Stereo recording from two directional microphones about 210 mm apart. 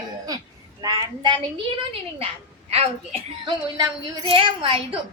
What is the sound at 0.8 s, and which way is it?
Speech, 20° right (ahead or behind).